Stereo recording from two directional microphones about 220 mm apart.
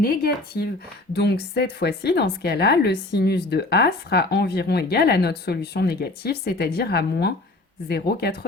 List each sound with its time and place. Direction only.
0.0 s speech: 40° left (ahead or behind)